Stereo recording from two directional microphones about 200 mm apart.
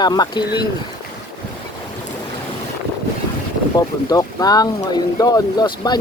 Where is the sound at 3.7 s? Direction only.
20° left (ahead or behind).